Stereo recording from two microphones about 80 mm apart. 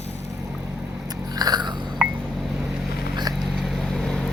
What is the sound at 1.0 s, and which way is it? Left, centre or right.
Biting, right.